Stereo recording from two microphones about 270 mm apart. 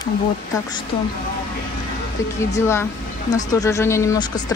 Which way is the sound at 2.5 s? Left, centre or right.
Centre.